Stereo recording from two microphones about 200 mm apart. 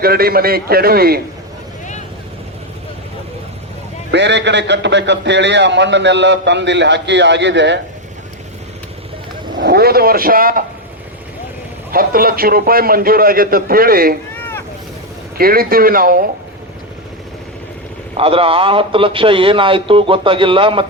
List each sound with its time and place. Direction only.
0.0 s a man's voice: 50° right (ahead or behind)
4.1 s a man's voice: 60° right (ahead or behind)
9.6 s a man's voice: 50° right (ahead or behind)
11.9 s a man's voice: 45° right (ahead or behind)
14.3 s boat: 10° left (ahead or behind)
15.4 s a man's voice: 50° right (ahead or behind)
18.2 s a man's voice: 30° right (ahead or behind)